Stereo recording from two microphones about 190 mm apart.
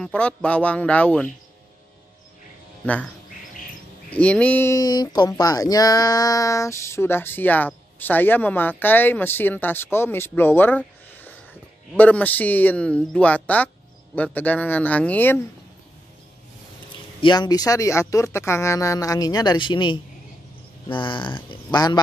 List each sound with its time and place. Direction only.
0.0 s speech: 5° left (ahead or behind)
2.8 s speech: 5° left (ahead or behind)
4.1 s speech: 5° left (ahead or behind)
17.2 s speech: 25° left (ahead or behind)